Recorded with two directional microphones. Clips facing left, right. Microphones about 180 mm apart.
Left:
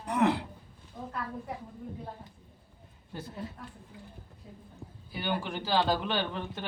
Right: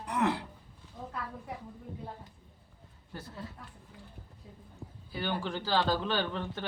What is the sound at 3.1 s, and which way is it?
Speech, 20° left (ahead or behind).